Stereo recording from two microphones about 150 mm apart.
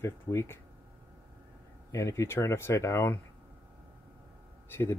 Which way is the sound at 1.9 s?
20° left (ahead or behind).